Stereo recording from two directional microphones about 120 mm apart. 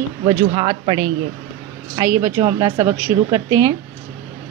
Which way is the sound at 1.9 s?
25° right (ahead or behind).